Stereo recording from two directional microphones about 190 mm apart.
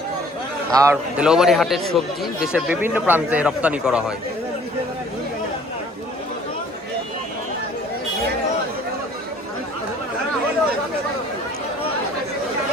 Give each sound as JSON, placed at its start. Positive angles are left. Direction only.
{"t": 0.7, "sound": "a man's voice", "side_deg": -15}
{"t": 1.1, "sound": "speech", "side_deg": -5}